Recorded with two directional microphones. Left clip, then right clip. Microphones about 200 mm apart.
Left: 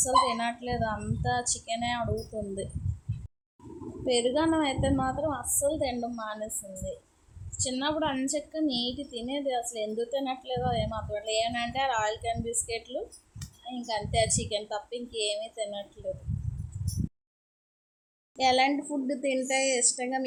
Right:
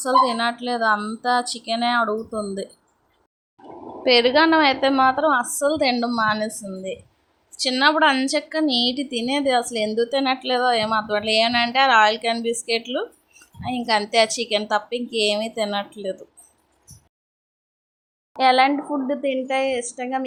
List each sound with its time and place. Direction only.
0.2 s a woman's voice: 15° right (ahead or behind)
4.0 s a woman's voice: 20° right (ahead or behind)
13.8 s a woman's voice: 20° right (ahead or behind)
18.3 s a woman's voice: 15° right (ahead or behind)